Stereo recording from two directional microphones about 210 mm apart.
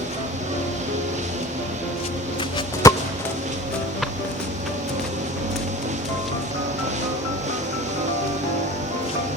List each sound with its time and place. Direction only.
2.8 s music: 15° left (ahead or behind)